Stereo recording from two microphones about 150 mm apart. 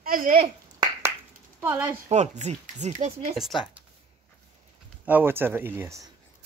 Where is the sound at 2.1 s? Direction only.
50° right (ahead or behind).